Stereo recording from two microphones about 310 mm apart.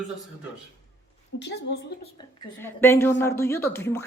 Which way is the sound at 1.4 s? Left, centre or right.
Left.